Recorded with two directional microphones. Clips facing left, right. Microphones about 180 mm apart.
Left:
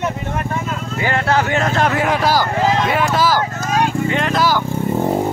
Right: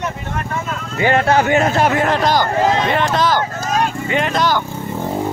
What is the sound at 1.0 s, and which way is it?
Speech, 20° right (ahead or behind).